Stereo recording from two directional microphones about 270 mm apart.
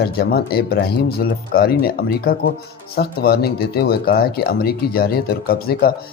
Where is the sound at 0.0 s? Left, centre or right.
Left.